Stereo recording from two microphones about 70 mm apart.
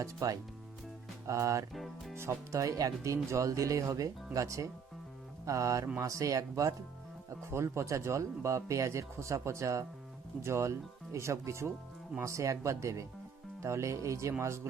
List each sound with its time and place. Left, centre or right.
0.0 s speech: right
1.7 s speech: centre
2.1 s speech: right